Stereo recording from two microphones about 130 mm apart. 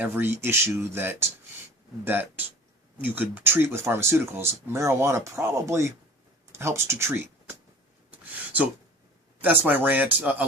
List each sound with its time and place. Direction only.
0.0 s speech: 15° right (ahead or behind)
8.1 s a sound: 10° right (ahead or behind)
9.4 s speech: 15° right (ahead or behind)